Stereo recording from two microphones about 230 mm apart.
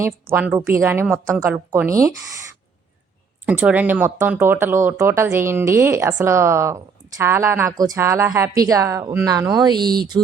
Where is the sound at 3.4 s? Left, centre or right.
Centre.